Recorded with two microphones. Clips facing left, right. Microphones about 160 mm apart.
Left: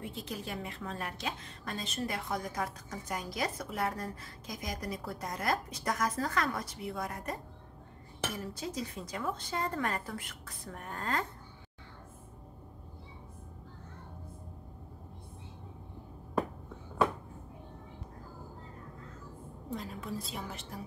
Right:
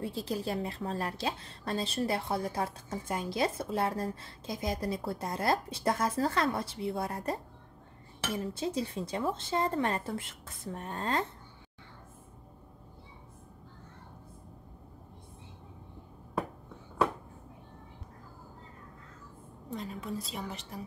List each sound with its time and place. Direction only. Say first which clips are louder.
0.0 s a woman's voice: right 6 dB; 35° right (ahead or behind)
8.4 s a woman's voice: right 5 dB; 25° right (ahead or behind)
19.7 s a woman's voice: right 1 dB; centre (ahead or behind)